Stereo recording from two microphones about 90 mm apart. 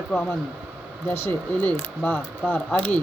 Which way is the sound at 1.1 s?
25° left (ahead or behind).